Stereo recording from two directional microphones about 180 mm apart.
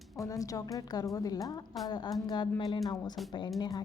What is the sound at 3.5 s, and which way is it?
Speech, 20° left (ahead or behind).